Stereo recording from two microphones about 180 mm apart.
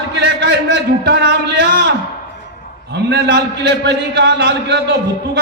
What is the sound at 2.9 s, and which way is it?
A man's voice, 70° right (ahead or behind).